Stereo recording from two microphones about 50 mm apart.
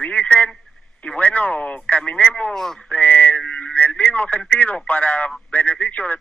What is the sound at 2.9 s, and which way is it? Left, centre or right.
Speech, left.